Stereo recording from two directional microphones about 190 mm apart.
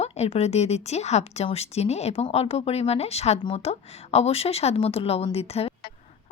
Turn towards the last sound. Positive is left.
turn(degrees=30)  # may be behind; listen again after turning